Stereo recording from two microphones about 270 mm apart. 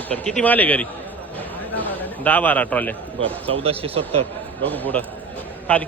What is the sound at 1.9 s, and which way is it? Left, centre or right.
A man's voice, centre.